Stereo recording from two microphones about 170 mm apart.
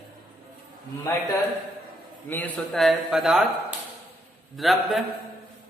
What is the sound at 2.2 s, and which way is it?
A man's voice, 10° left (ahead or behind).